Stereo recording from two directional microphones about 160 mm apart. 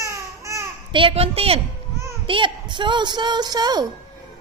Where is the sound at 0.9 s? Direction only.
35° right (ahead or behind).